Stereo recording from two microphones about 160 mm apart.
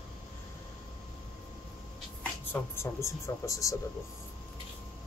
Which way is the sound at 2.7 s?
20° left (ahead or behind).